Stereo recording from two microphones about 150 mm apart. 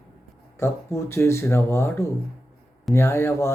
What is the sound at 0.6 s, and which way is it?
Speech, 20° left (ahead or behind).